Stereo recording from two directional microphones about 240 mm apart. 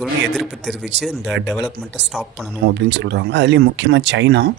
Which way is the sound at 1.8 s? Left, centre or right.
Right.